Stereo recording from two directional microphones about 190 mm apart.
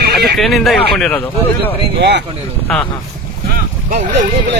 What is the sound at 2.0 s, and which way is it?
Speech, 60° right (ahead or behind).